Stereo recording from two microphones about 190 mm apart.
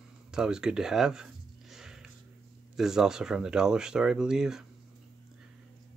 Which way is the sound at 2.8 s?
5° right (ahead or behind).